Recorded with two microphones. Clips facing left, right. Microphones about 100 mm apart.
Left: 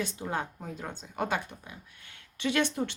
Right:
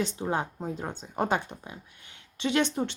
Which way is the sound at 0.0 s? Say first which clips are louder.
Right 4 dB; 20° right (ahead or behind).